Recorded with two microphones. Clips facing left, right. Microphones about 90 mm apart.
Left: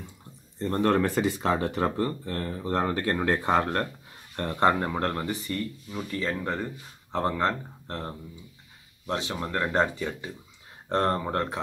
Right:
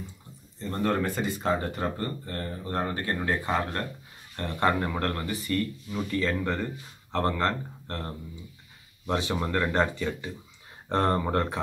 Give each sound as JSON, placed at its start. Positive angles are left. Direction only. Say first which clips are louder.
{"t": 0.6, "sound": "speech", "louder": "left 4 dB", "side_deg": 65}
{"t": 4.6, "sound": "speech", "louder": "left 2 dB", "side_deg": 30}
{"t": 5.5, "sound": "speech", "louder": "right 3 dB", "side_deg": 10}
{"t": 9.0, "sound": "speech", "louder": "right 2 dB", "side_deg": -5}
{"t": 9.6, "sound": "speech", "louder": "left 2 dB", "side_deg": 10}
{"t": 10.9, "sound": "speech", "louder": "even", "side_deg": 0}